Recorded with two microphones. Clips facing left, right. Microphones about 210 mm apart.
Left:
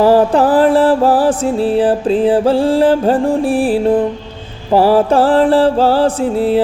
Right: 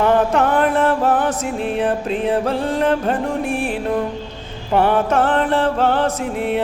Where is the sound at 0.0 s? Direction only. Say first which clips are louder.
Left 6 dB; 30° left (ahead or behind).